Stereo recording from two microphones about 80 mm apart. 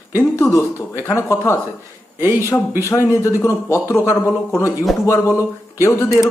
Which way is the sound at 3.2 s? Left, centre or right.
Left.